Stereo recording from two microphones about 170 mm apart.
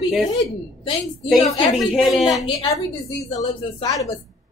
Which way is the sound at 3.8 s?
20° left (ahead or behind).